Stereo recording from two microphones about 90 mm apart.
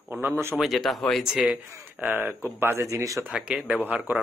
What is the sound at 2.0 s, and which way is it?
Speech, 20° right (ahead or behind).